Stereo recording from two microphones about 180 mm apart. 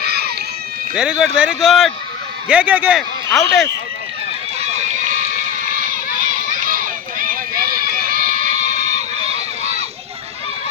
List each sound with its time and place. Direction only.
0.0 s a sound: 60° right (ahead or behind)
0.9 s a man's voice: 5° right (ahead or behind)
4.6 s run: 40° right (ahead or behind)
6.3 s run: 50° right (ahead or behind)